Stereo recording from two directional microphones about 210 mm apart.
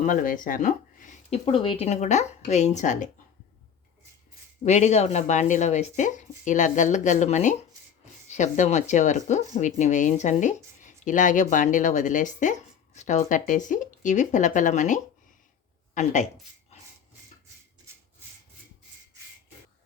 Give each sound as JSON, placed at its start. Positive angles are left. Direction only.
{"t": 0.0, "sound": "speech", "side_deg": 40}
{"t": 4.6, "sound": "speech", "side_deg": 35}